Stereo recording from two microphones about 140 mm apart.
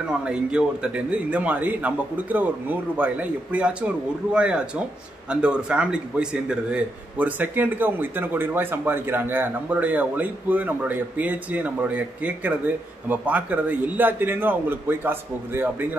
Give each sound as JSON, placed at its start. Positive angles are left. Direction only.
{"t": 0.2, "sound": "a man's voice", "side_deg": -5}